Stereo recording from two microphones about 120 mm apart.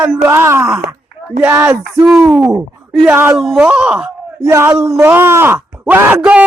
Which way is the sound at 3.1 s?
20° right (ahead or behind).